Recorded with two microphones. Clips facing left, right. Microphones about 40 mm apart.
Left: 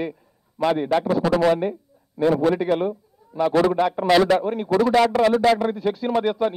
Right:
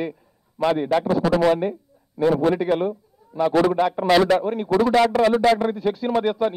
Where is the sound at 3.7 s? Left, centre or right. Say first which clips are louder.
Even; centre.